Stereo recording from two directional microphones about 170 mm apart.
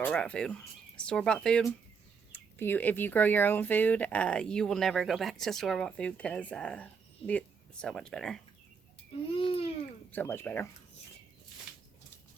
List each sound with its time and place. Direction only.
0.0 s speech: 5° left (ahead or behind)
9.3 s speech: 35° left (ahead or behind)
10.1 s speech: 10° left (ahead or behind)